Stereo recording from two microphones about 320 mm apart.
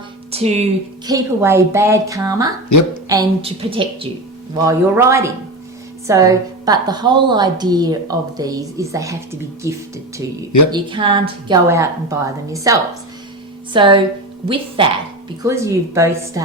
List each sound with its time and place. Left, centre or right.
0.3 s a woman's voice: centre
2.6 s speech: left
3.1 s a woman's voice: centre